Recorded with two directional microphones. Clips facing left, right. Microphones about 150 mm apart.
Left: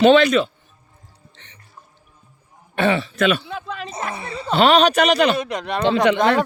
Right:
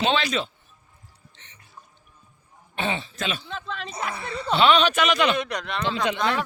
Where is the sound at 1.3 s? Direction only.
70° left (ahead or behind).